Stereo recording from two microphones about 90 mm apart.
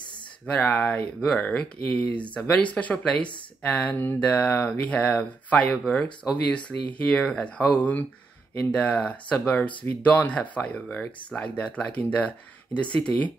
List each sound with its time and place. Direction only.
0.5 s speech: 15° left (ahead or behind)